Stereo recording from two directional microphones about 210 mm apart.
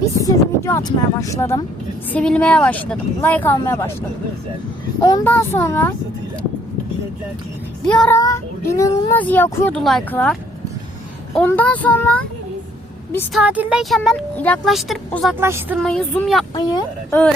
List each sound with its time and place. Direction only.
0.0 s speech: 15° left (ahead or behind)
5.0 s speech: 15° left (ahead or behind)
7.9 s speech: 5° left (ahead or behind)
8.2 s speech: 15° left (ahead or behind)
11.3 s speech: 10° left (ahead or behind)
13.3 s speech: 5° right (ahead or behind)
15.4 s a woman's voice: 10° right (ahead or behind)
15.8 s speech: centre (ahead or behind)
16.6 s speech: 20° left (ahead or behind)